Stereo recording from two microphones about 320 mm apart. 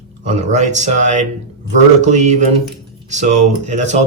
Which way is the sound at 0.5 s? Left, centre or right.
Right.